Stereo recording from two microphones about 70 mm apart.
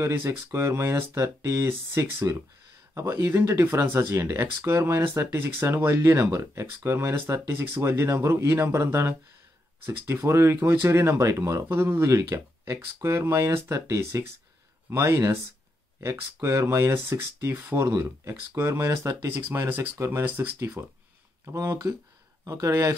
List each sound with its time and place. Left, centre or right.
0.0 s speech: right
20.2 s speech: right
20.5 s speech: right
22.4 s speech: right